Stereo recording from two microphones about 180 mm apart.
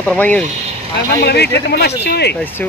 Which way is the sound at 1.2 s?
65° left (ahead or behind).